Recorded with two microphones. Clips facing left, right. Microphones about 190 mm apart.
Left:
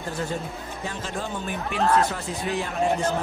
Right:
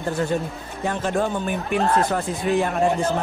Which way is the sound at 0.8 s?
60° right (ahead or behind).